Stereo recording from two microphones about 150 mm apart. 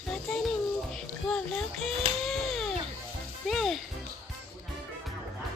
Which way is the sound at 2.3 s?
Centre (ahead or behind).